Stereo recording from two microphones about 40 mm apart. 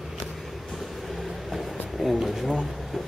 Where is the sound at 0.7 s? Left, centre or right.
Centre.